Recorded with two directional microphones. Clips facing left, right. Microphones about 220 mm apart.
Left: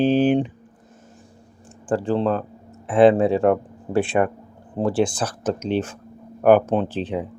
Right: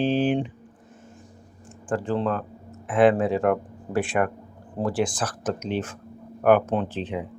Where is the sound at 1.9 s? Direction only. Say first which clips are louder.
Left 4 dB; 30° left (ahead or behind).